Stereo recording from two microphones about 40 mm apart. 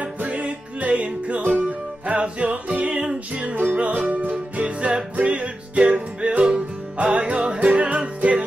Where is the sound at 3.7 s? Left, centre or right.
Right.